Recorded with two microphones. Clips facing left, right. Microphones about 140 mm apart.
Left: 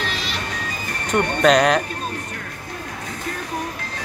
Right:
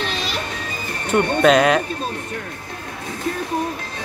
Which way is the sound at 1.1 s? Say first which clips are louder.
Right 2 dB; 5° right (ahead or behind).